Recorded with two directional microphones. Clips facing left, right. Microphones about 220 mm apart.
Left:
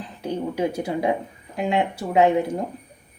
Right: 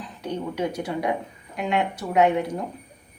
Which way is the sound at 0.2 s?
30° left (ahead or behind).